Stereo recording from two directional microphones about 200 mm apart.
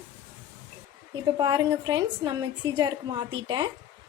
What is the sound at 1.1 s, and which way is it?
A woman's voice, 20° right (ahead or behind).